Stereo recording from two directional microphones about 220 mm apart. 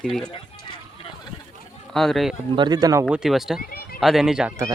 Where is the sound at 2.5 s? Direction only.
20° right (ahead or behind).